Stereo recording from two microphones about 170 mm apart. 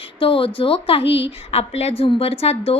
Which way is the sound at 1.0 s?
90° left.